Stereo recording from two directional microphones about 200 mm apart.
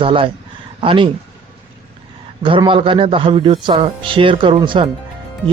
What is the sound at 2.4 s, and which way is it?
Speech, 25° right (ahead or behind).